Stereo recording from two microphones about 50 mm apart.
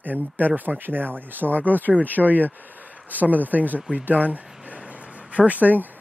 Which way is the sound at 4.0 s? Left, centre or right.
Right.